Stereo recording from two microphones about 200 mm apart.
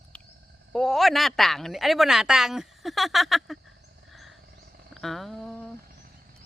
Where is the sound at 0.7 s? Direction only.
Centre (ahead or behind).